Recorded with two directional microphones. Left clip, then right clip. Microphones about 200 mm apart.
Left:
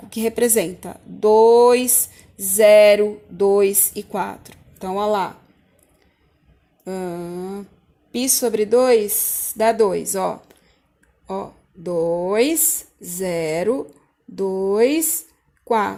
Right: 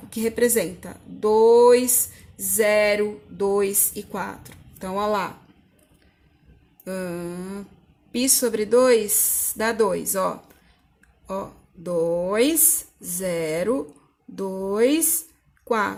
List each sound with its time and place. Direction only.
0.1 s speech: 25° left (ahead or behind)
6.8 s speech: 20° left (ahead or behind)
11.8 s speech: 15° left (ahead or behind)